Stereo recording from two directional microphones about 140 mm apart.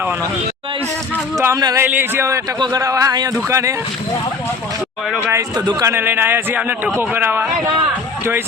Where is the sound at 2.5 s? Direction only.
30° right (ahead or behind).